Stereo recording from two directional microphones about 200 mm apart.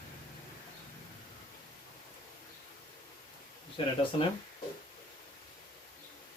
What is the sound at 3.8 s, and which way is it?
Speech, 25° left (ahead or behind).